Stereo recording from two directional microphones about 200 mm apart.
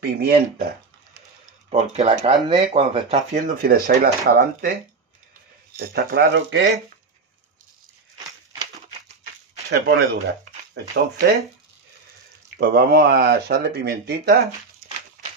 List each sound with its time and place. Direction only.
0.0 s speech: 50° right (ahead or behind)
1.7 s speech: 30° right (ahead or behind); by 4.7 s 45° right (ahead or behind)
5.8 s speech: 60° right (ahead or behind)
9.7 s speech: 55° right (ahead or behind)
10.7 s speech: 70° right (ahead or behind)
12.5 s speech: 50° right (ahead or behind)